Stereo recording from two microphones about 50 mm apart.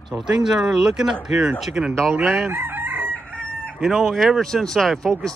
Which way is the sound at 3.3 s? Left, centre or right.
Centre.